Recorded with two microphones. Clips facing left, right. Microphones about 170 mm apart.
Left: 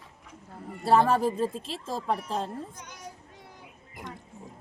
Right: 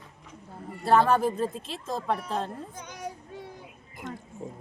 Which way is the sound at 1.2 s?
Centre (ahead or behind).